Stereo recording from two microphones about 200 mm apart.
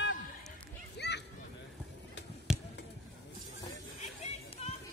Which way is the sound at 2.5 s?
5° right (ahead or behind).